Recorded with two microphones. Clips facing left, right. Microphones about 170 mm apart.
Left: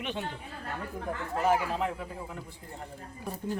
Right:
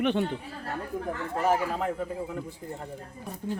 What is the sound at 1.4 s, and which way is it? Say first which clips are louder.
A man's voice: right 1 dB; 45° right (ahead or behind).